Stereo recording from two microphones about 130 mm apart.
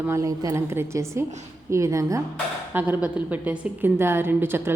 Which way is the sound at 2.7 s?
15° right (ahead or behind).